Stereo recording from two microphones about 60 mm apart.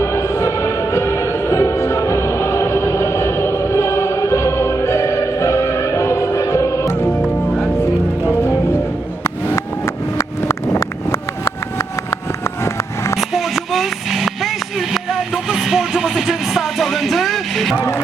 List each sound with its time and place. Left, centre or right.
0.0 s music: left
8.3 s music: left
10.2 s vehicle: left
13.3 s vehicle: centre
15.4 s music: centre